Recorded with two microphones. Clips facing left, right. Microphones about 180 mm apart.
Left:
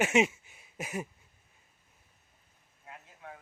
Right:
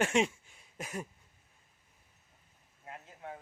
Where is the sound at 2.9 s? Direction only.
30° right (ahead or behind).